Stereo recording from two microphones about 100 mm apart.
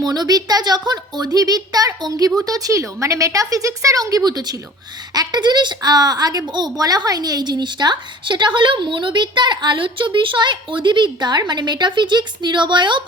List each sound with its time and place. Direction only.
0.0 s a woman's voice: 40° right (ahead or behind)